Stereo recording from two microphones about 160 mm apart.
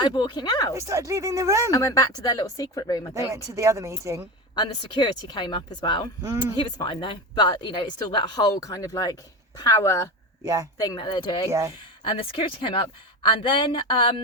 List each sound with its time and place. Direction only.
0.0 s speech: 25° left (ahead or behind)
0.7 s speech: 20° right (ahead or behind)
1.7 s speech: 20° left (ahead or behind)
3.3 s speech: 20° right (ahead or behind)
4.5 s speech: 30° left (ahead or behind)
10.4 s speech: 20° right (ahead or behind)
10.8 s speech: 25° left (ahead or behind)